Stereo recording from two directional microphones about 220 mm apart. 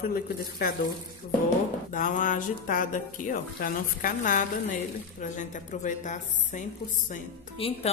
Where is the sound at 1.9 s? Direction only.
35° left (ahead or behind).